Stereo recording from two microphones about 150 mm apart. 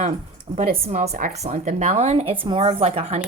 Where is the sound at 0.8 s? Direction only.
45° right (ahead or behind).